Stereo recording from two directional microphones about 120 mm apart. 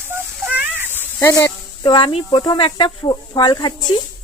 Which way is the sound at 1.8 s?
35° left (ahead or behind).